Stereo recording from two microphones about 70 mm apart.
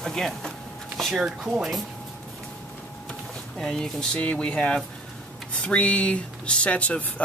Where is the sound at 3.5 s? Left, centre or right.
Centre.